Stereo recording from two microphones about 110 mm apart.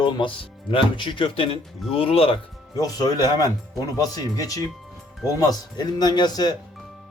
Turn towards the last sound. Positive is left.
turn(degrees=40)  # may be behind; listen again after turning